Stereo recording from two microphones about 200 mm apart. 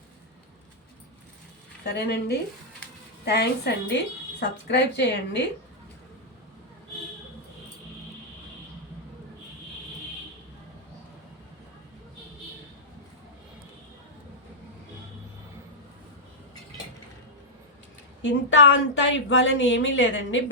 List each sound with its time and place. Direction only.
1.8 s a woman's voice: 55° left (ahead or behind)
18.2 s speech: 65° left (ahead or behind)